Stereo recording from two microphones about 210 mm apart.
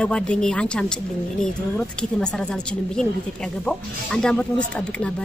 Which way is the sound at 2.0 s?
5° left (ahead or behind).